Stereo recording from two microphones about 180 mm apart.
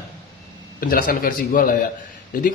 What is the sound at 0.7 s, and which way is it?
Speech, 55° left (ahead or behind).